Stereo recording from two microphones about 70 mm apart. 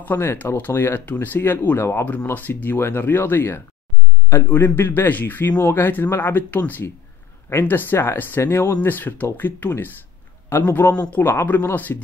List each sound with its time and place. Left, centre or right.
0.0 s speech: left